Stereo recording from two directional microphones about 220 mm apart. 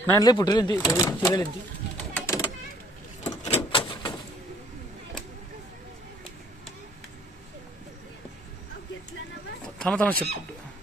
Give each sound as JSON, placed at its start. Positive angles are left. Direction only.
{"t": 0.0, "sound": "speech", "side_deg": 15}
{"t": 2.0, "sound": "bird", "side_deg": 10}
{"t": 3.4, "sound": "door", "side_deg": 25}
{"t": 9.8, "sound": "speech", "side_deg": 5}